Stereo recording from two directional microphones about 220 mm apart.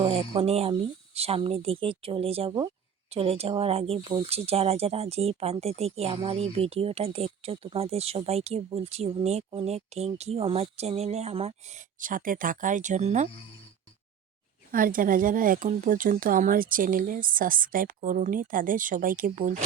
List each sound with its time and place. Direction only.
0.0 s speech: 25° right (ahead or behind)
14.7 s speech: 40° right (ahead or behind)